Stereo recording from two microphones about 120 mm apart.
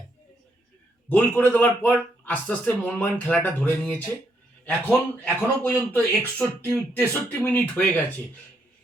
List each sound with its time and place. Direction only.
1.1 s a man's voice: 10° left (ahead or behind)